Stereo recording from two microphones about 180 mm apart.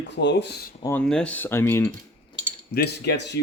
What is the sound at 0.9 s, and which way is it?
Speech, 5° left (ahead or behind).